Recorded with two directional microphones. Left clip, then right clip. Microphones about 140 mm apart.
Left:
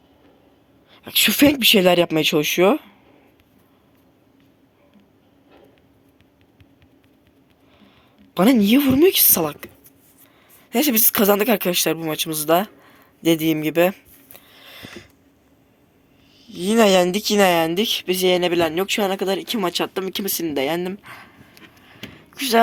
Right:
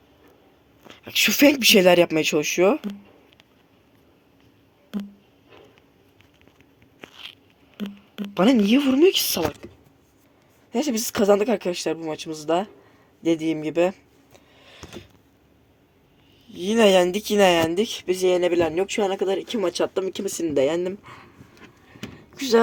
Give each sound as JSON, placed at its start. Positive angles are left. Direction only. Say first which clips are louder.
{"t": 0.9, "sound": "speech", "louder": "left 2 dB", "side_deg": 10}
{"t": 8.3, "sound": "speech", "louder": "left 2 dB", "side_deg": 15}
{"t": 9.6, "sound": "a sound", "louder": "left 4 dB", "side_deg": 15}
{"t": 10.7, "sound": "speech", "louder": "left 5 dB", "side_deg": 15}
{"t": 16.5, "sound": "speech", "louder": "left 2 dB", "side_deg": 5}